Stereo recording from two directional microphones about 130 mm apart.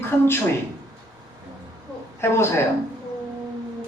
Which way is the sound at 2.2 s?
20° left (ahead or behind).